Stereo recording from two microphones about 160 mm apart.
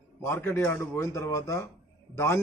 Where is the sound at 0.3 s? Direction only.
15° left (ahead or behind).